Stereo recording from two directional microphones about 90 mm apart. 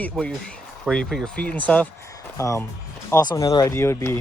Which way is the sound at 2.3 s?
35° left (ahead or behind).